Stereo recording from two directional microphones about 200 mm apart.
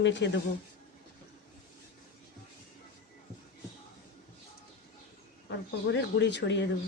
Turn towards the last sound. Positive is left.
turn(degrees=60)  # may be behind; listen again after turning